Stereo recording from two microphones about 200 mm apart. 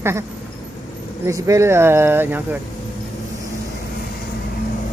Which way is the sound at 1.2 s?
15° right (ahead or behind).